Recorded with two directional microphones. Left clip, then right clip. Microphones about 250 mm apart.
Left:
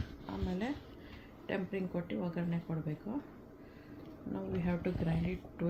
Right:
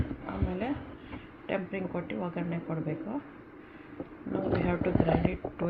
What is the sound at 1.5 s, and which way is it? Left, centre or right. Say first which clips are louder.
A woman's voice: right 5 dB; centre.